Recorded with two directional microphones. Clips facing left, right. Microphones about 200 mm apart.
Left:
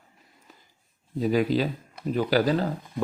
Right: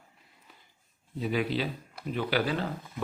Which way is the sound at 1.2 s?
40° left (ahead or behind).